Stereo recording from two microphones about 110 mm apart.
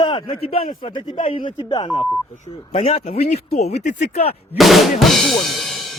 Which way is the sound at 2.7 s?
70° left (ahead or behind).